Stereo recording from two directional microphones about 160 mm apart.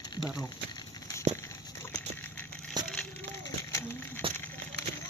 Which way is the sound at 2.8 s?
25° right (ahead or behind).